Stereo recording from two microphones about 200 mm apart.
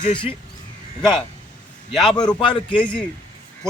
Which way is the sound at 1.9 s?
Centre (ahead or behind).